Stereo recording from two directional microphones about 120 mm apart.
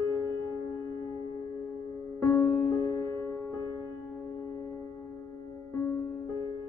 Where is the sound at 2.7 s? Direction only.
30° left (ahead or behind).